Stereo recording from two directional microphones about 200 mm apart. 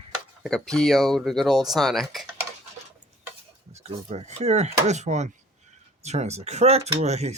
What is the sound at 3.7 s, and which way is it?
Speech, 30° right (ahead or behind).